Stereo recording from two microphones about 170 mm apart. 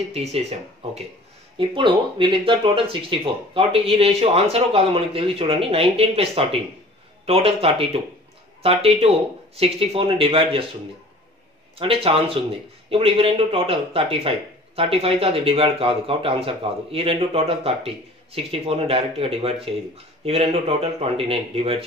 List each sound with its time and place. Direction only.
0.1 s speech: 40° right (ahead or behind)
11.8 s speech: 35° right (ahead or behind)